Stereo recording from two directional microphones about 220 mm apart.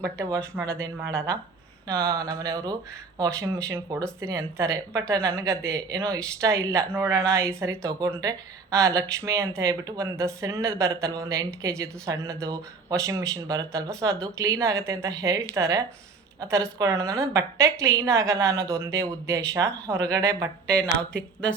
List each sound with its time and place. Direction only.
0.8 s speech: 15° right (ahead or behind)
20.7 s a woman's voice: 5° left (ahead or behind)